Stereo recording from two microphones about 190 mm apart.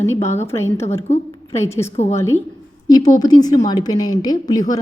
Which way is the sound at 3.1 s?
20° left (ahead or behind).